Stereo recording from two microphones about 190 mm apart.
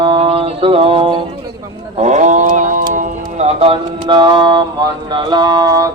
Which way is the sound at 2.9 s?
35° right (ahead or behind).